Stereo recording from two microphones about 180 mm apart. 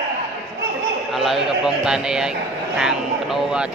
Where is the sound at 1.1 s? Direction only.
Centre (ahead or behind).